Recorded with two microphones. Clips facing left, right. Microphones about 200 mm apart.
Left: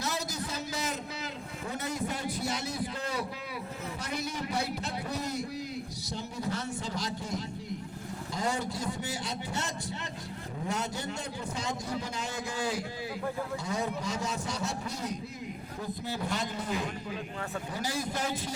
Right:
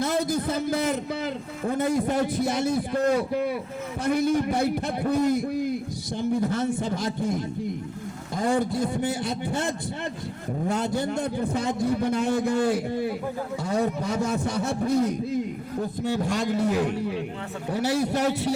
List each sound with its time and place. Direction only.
0.0 s a man's voice: 55° right (ahead or behind)
16.0 s a man's voice: 75° right (ahead or behind)